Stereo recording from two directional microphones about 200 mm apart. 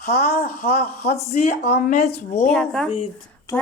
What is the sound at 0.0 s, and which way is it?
Speech, 50° left (ahead or behind).